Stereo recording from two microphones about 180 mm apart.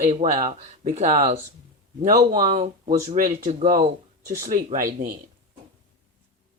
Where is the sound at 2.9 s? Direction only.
50° right (ahead or behind).